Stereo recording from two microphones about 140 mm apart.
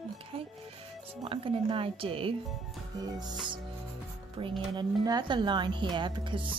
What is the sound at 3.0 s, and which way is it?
Speech, 30° right (ahead or behind).